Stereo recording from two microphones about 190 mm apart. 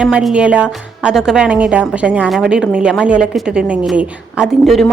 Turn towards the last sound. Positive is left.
turn(degrees=0)  # may be behind; listen again after turning